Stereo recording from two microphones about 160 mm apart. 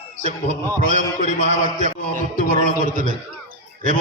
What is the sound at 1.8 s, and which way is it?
A man's voice, 55° right (ahead or behind).